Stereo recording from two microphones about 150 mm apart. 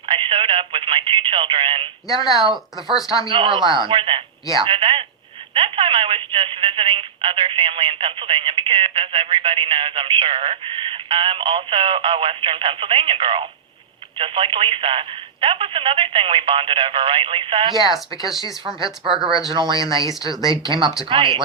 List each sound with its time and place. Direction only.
0.0 s speech: 35° right (ahead or behind)
2.2 s speech: centre (ahead or behind)
3.2 s speech: 35° right (ahead or behind)
18.8 s speech: 5° right (ahead or behind)
19.5 s speech: 30° right (ahead or behind)
19.7 s speech: 25° left (ahead or behind)
20.5 s speech: 35° right (ahead or behind)
20.8 s speech: 5° right (ahead or behind)
21.1 s speech: 35° right (ahead or behind)